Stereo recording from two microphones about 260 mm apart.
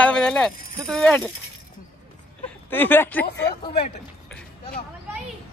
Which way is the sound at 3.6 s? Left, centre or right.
Left.